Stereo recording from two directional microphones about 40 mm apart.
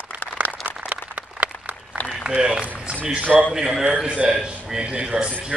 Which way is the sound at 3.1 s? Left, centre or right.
Right.